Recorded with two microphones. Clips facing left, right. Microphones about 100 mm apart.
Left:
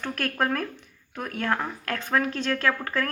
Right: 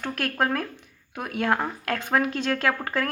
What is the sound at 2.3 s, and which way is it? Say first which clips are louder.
Speech: right 1 dB; 35° right (ahead or behind).